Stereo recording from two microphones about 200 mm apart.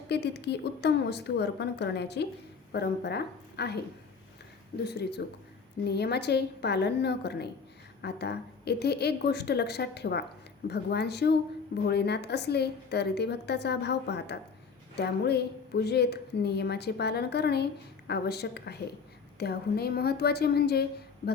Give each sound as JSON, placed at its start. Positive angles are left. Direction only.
{"t": 0.1, "sound": "a woman's voice", "side_deg": 55}
{"t": 4.9, "sound": "a woman's voice", "side_deg": 55}